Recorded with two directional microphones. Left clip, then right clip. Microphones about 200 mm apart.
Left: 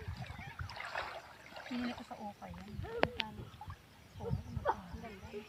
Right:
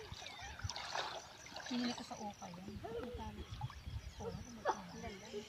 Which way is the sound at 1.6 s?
10° left (ahead or behind).